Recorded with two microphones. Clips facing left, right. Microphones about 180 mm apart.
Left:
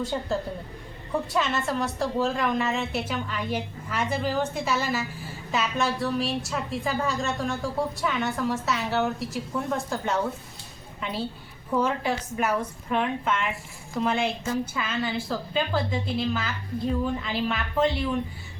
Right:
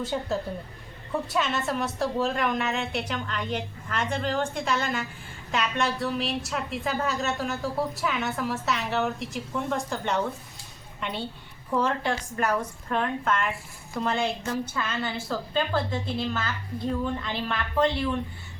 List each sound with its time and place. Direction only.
0.0 s a woman's voice: centre (ahead or behind)